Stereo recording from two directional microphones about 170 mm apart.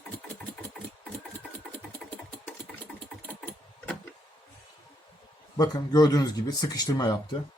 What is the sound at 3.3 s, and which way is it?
Typing, 10° left (ahead or behind).